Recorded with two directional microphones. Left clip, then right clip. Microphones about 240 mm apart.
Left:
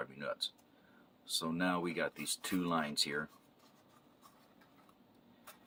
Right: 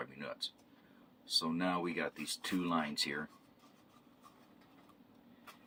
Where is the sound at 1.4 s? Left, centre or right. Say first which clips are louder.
Even; left.